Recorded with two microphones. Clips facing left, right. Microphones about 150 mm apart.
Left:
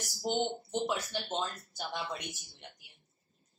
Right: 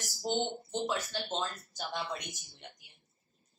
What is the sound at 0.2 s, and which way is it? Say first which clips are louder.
Speech: left 1 dB; 15° left (ahead or behind).